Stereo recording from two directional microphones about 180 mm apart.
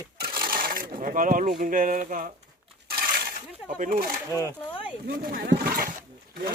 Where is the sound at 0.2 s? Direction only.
55° right (ahead or behind).